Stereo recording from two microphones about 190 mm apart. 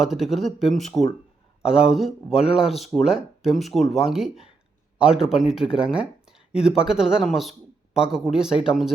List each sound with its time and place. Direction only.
0.0 s speech: centre (ahead or behind)